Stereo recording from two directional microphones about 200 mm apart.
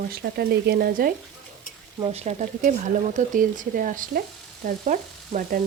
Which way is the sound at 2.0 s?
30° right (ahead or behind).